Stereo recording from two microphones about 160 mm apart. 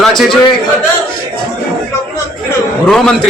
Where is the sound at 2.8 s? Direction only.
5° left (ahead or behind).